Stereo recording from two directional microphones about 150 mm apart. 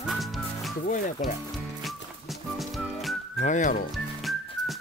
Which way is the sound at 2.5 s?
Centre (ahead or behind).